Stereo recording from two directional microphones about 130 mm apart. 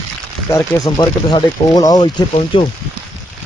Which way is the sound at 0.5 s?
30° left (ahead or behind).